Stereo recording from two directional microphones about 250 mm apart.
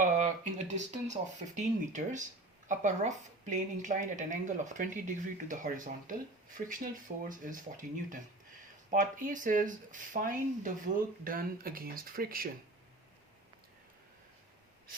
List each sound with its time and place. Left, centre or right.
0.7 s a woman's voice: right